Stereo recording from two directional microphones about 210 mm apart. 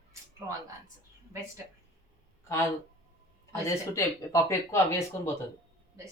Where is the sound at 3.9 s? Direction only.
15° left (ahead or behind).